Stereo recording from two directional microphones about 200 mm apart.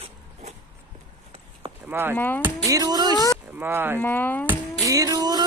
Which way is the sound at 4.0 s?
10° left (ahead or behind).